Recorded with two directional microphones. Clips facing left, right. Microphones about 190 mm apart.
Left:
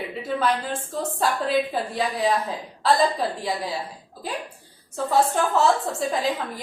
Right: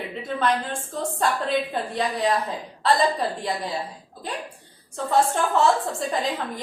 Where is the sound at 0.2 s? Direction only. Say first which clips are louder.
Even; 5° left (ahead or behind).